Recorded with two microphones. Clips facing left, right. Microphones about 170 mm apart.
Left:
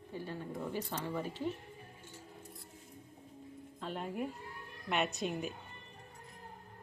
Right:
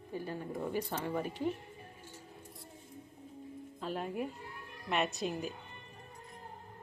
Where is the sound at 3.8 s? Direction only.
5° right (ahead or behind).